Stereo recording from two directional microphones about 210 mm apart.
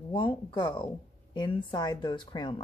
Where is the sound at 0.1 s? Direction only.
25° left (ahead or behind).